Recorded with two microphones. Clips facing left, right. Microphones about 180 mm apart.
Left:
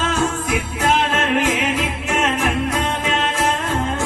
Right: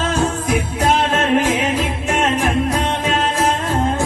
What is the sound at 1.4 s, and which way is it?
Music, 35° right (ahead or behind).